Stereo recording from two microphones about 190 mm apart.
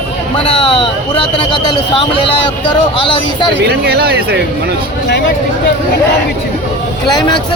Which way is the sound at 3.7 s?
55° right (ahead or behind).